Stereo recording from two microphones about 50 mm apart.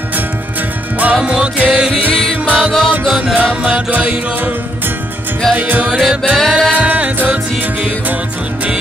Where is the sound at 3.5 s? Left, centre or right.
Right.